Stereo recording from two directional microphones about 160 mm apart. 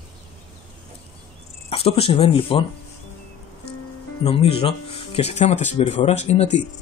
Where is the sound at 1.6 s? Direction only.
40° left (ahead or behind).